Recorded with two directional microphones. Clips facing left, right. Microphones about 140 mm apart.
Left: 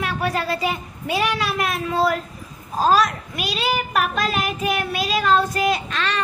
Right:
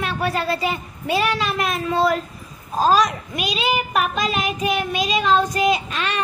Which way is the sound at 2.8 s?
Centre (ahead or behind).